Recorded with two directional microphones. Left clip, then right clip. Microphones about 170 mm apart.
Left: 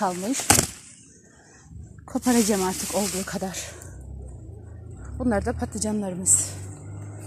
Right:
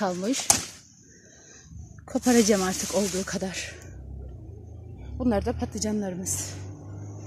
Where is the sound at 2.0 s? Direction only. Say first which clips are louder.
Right 1 dB; 20° right (ahead or behind).